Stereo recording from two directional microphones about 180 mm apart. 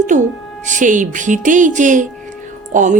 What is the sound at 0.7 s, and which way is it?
Speech, 45° right (ahead or behind).